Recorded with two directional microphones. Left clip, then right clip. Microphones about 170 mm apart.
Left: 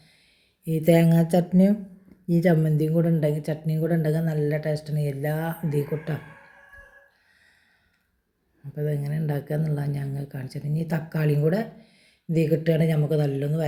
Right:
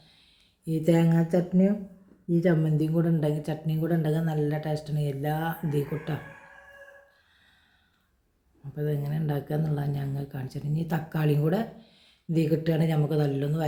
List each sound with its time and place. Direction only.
0.6 s a woman's voice: 15° left (ahead or behind)
8.7 s a woman's voice: 5° left (ahead or behind)